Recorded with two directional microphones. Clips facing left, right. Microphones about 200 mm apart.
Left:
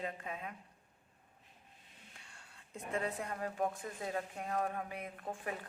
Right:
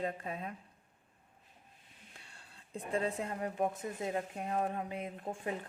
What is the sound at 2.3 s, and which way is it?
A woman's voice, 30° right (ahead or behind).